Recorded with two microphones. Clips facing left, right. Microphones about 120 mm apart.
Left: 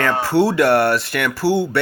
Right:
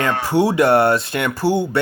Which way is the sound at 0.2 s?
15° right (ahead or behind).